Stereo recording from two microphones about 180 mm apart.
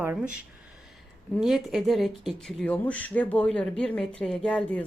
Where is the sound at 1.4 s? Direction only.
Centre (ahead or behind).